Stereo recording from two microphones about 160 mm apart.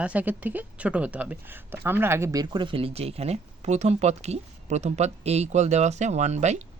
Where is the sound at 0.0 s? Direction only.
10° right (ahead or behind).